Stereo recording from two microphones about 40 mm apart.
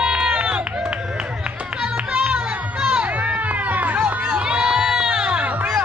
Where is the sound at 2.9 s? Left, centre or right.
Right.